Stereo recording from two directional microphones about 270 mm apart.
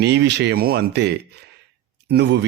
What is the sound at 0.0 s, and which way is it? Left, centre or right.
Speech, right.